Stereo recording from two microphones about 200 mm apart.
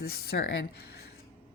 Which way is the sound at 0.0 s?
50° left (ahead or behind).